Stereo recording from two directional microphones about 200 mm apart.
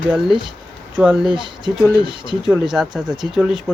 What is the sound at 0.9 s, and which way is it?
Speech, 5° right (ahead or behind).